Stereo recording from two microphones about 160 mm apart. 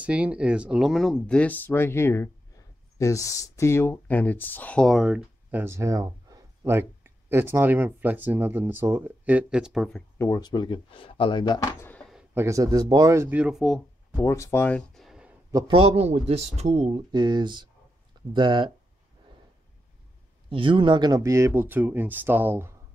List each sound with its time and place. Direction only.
0.0 s speech: 10° right (ahead or behind)
10.1 s speech: 20° left (ahead or behind)
12.4 s speech: 20° right (ahead or behind); by 13.7 s centre (ahead or behind)
14.1 s speech: 20° left (ahead or behind)
15.0 s a sound: 5° right (ahead or behind)
15.5 s a man's voice: 35° right (ahead or behind)
20.4 s speech: 30° right (ahead or behind); by 22.7 s 10° right (ahead or behind)